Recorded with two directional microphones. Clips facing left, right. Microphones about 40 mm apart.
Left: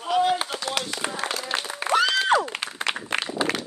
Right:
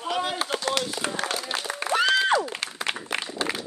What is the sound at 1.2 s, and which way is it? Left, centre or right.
Speech, left.